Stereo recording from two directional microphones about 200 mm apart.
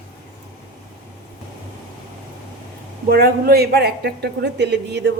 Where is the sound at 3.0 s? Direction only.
50° right (ahead or behind).